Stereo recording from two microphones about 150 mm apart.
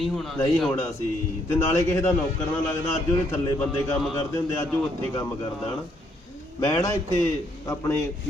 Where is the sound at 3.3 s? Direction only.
15° left (ahead or behind).